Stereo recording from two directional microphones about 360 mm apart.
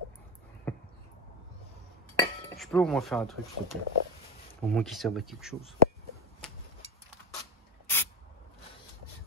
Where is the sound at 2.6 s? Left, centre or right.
Centre.